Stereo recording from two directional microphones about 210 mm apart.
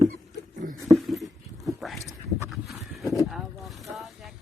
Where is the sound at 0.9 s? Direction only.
Centre (ahead or behind).